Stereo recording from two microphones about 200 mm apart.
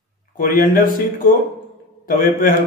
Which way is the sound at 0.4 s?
45° left (ahead or behind).